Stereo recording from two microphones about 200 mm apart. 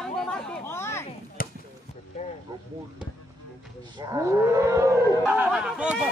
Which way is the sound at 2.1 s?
35° left (ahead or behind).